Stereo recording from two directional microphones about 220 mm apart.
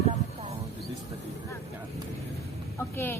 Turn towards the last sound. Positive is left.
turn(degrees=10)  # may be behind; listen again after turning